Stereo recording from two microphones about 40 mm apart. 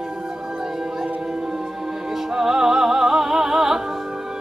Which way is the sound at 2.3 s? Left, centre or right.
Centre.